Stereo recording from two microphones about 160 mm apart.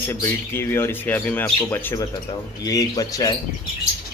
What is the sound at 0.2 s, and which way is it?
Speech, 15° left (ahead or behind).